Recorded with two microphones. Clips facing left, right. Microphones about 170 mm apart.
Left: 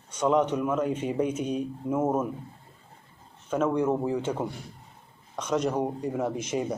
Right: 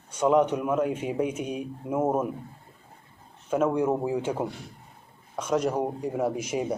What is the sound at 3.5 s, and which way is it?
Speech, 10° right (ahead or behind).